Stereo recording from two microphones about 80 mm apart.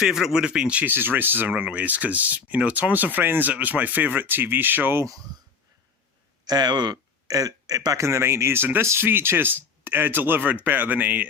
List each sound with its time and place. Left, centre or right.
0.0 s speech: centre; by 5.0 s right
6.4 s speech: right
8.0 s speech: right